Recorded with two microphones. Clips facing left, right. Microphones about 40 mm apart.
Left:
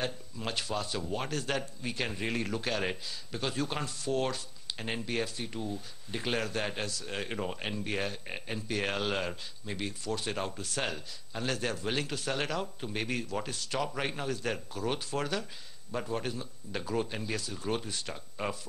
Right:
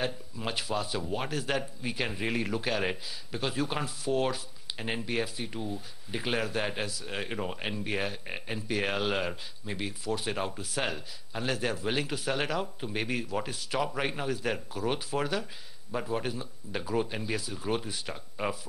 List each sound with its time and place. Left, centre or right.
0.0 s a man's voice: centre